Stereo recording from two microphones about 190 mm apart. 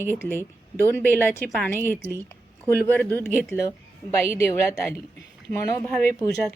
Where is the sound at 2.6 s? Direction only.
10° left (ahead or behind).